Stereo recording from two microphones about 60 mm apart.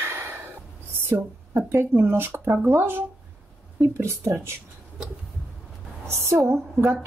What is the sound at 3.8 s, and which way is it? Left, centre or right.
Speech, right.